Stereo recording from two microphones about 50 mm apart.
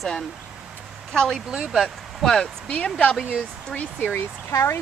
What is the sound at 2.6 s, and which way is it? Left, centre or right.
Speech, left.